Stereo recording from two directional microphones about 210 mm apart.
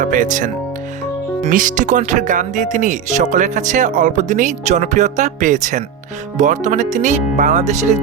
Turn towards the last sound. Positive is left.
turn(degrees=-35)  # may be behind; listen again after turning